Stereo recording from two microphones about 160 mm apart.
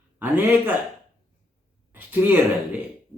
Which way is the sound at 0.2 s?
10° right (ahead or behind).